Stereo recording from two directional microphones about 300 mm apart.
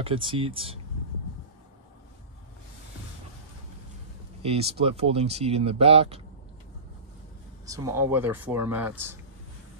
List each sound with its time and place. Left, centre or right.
0.0 s speech: centre
4.4 s speech: centre
7.6 s speech: centre